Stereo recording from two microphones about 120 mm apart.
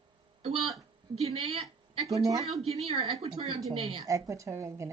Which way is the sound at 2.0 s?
30° right (ahead or behind).